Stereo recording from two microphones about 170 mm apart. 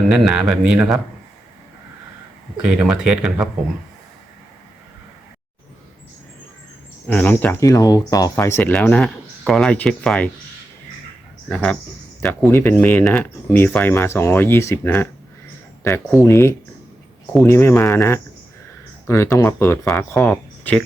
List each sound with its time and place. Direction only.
0.1 s speech: 5° right (ahead or behind)
2.6 s speech: 5° right (ahead or behind)
7.1 s speech: 10° left (ahead or behind)
11.4 s speech: 5° left (ahead or behind)
20.3 s a sound: 5° left (ahead or behind)